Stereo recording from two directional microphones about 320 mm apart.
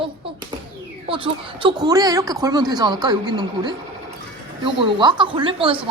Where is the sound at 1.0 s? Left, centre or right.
Centre.